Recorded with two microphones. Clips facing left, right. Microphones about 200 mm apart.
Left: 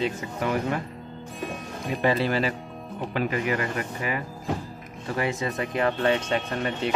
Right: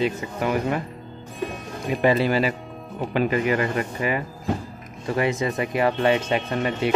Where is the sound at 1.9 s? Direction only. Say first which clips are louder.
Right 4 dB; 15° right (ahead or behind).